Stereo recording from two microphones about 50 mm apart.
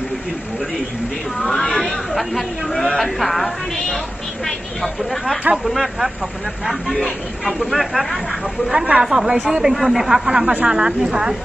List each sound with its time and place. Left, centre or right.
1.4 s chatter: centre
3.0 s a woman's voice: centre
8.7 s speech: right
9.0 s a man's voice: centre